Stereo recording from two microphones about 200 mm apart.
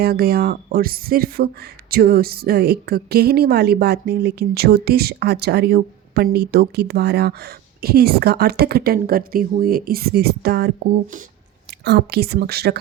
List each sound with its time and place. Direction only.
0.0 s a woman's voice: 50° right (ahead or behind)
11.9 s a woman's voice: 55° right (ahead or behind)